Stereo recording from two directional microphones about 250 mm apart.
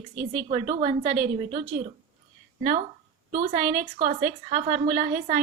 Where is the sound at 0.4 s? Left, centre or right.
Right.